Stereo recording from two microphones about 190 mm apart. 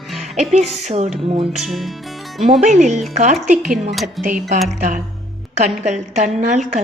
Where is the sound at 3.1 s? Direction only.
40° right (ahead or behind).